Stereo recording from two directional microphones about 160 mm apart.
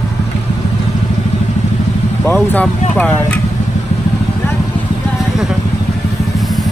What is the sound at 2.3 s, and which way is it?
Speech, 5° left (ahead or behind).